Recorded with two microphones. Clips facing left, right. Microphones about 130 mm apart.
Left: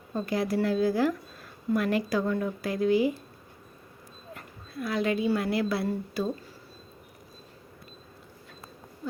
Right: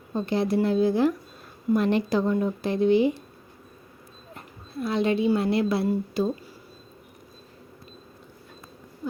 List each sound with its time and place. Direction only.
0.1 s speech: 25° right (ahead or behind)
4.4 s speech: 25° right (ahead or behind)